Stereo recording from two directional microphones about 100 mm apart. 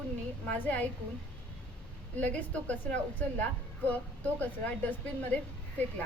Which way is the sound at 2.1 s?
15° left (ahead or behind).